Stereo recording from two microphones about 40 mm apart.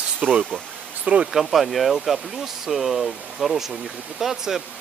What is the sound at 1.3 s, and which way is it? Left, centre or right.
Speech, centre.